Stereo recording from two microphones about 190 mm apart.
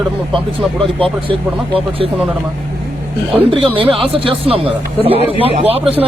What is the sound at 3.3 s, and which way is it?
Speech, 30° right (ahead or behind).